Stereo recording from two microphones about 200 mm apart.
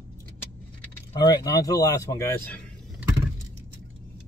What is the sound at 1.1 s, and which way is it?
Speech, 20° left (ahead or behind).